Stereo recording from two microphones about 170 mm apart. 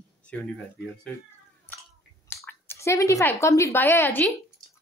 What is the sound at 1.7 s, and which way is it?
Chewing, 10° left (ahead or behind).